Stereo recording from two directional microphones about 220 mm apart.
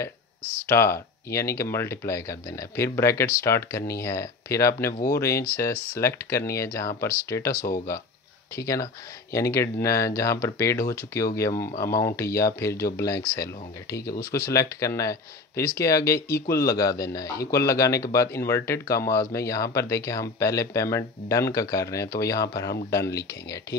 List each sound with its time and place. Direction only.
0.4 s speech: 10° right (ahead or behind)
0.7 s speech: 10° left (ahead or behind)
8.5 s speech: 15° left (ahead or behind)